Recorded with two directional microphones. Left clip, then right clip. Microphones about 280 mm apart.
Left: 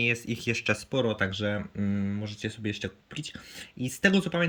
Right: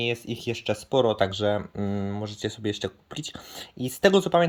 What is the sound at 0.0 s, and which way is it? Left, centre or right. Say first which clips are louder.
Speech: even; centre.